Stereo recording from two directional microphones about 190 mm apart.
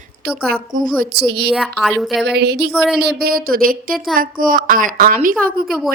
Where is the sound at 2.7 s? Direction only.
Centre (ahead or behind).